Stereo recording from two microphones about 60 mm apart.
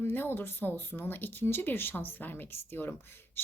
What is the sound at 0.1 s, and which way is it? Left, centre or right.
Speech, left.